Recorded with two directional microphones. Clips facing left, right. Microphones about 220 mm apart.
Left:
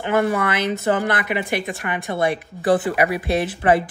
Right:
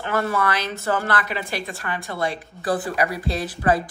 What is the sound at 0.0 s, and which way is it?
A woman's voice, 15° left (ahead or behind).